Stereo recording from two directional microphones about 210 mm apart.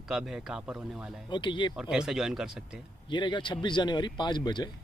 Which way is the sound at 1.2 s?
20° left (ahead or behind).